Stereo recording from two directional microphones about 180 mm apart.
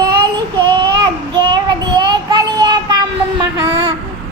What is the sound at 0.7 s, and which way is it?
Child singing, 25° right (ahead or behind).